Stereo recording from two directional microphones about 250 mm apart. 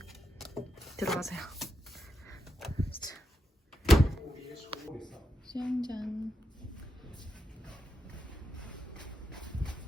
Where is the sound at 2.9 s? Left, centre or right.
Left.